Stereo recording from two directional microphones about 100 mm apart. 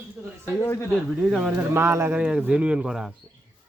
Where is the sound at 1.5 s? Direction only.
25° right (ahead or behind).